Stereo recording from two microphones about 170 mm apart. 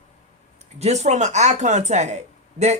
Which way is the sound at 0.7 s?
40° right (ahead or behind).